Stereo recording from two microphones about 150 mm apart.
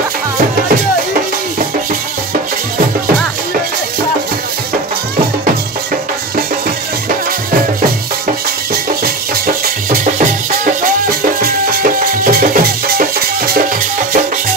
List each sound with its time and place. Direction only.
9.8 s music: 60° right (ahead or behind); by 13.7 s 75° right (ahead or behind)